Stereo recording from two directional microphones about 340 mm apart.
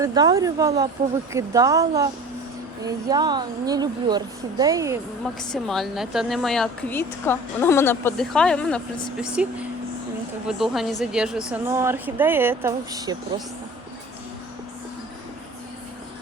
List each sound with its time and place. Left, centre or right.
0.0 s speech: centre
5.4 s speech: centre